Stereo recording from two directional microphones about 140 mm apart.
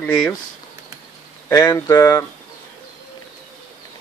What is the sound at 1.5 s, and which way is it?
Speech, 20° left (ahead or behind).